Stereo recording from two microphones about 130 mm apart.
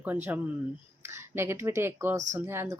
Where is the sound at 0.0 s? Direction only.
15° right (ahead or behind).